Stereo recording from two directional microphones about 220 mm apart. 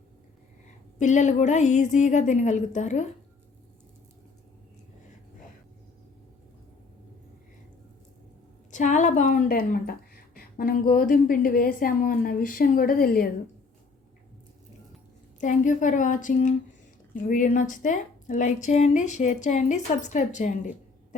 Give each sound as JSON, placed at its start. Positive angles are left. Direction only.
{"t": 0.9, "sound": "a woman's voice", "side_deg": 35}
{"t": 8.7, "sound": "a woman's voice", "side_deg": 35}
{"t": 15.4, "sound": "a woman's voice", "side_deg": 35}